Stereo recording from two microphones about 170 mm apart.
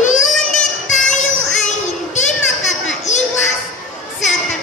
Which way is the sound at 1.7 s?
45° left (ahead or behind).